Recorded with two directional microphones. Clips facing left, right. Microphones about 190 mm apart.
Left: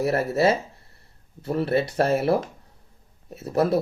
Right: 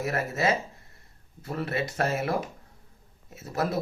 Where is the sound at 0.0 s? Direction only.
30° left (ahead or behind).